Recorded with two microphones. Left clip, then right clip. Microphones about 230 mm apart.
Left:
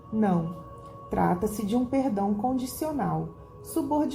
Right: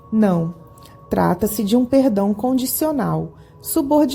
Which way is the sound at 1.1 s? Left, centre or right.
Right.